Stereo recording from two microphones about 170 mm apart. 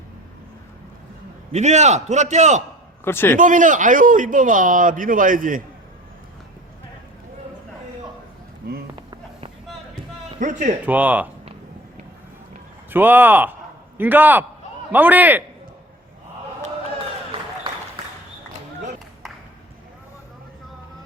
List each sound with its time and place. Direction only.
1.5 s a man's voice: 40° right (ahead or behind)
3.0 s a man's voice: 15° left (ahead or behind)
3.3 s a man's voice: 50° right (ahead or behind)
8.6 s a sound: 55° right (ahead or behind)
9.0 s a sound: 30° right (ahead or behind)
10.4 s a man's voice: 45° right (ahead or behind)
10.8 s speech: 10° right (ahead or behind)
12.9 s speech: 10° right (ahead or behind)